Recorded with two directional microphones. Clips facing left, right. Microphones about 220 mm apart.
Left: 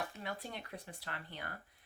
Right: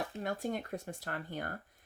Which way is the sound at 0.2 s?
45° right (ahead or behind).